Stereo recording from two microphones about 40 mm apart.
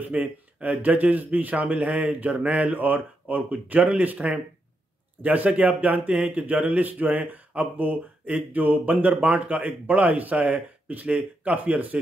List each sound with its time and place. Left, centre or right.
0.1 s speech: right
2.8 s speech: right